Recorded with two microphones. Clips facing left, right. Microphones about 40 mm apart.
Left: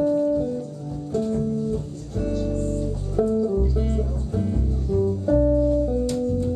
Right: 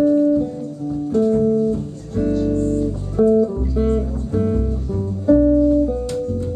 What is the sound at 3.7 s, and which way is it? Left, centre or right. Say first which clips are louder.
Music: right 7 dB; centre.